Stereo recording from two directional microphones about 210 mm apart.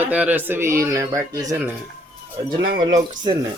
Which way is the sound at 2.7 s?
20° right (ahead or behind).